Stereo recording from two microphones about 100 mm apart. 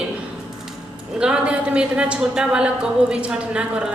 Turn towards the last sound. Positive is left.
turn(degrees=-10)  # may be behind; listen again after turning